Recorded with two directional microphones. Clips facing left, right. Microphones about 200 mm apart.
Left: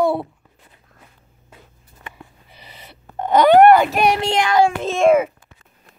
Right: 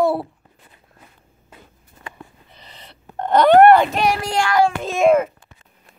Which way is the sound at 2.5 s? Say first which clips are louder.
Left 1 dB; 10° left (ahead or behind).